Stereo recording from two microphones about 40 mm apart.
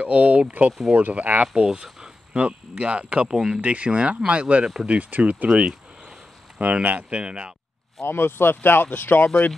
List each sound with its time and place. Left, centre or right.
0.0 s speech: right
1.5 s speech: right
2.3 s speech: right
3.3 s speech: centre
3.6 s speech: right
6.6 s speech: right
8.0 s speech: left
8.9 s speech: left